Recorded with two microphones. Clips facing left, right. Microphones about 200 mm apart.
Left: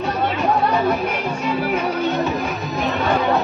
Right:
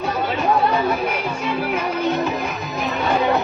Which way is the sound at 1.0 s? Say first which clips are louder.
Left 1 dB; centre (ahead or behind).